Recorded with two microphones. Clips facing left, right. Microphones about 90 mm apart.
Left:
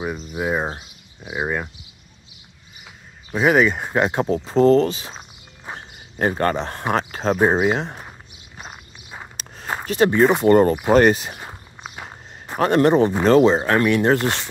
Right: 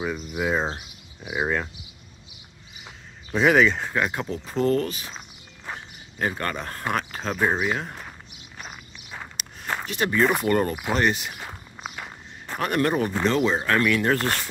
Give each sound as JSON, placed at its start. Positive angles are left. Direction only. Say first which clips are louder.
{"t": 0.0, "sound": "speech", "louder": "left 2 dB", "side_deg": 20}
{"t": 3.3, "sound": "speech", "louder": "left 2 dB", "side_deg": 10}
{"t": 3.9, "sound": "speech", "louder": "left 7 dB", "side_deg": 30}
{"t": 5.8, "sound": "a sound", "louder": "left 6 dB", "side_deg": 40}
{"t": 6.5, "sound": "speech", "louder": "left 5 dB", "side_deg": 25}
{"t": 9.4, "sound": "a sound", "louder": "left 1 dB", "side_deg": 35}
{"t": 9.8, "sound": "speech", "louder": "left 7 dB", "side_deg": 35}
{"t": 11.9, "sound": "walk", "louder": "left 1 dB", "side_deg": 20}
{"t": 12.5, "sound": "speech", "louder": "left 8 dB", "side_deg": 30}
{"t": 13.2, "sound": "speech", "louder": "left 8 dB", "side_deg": 40}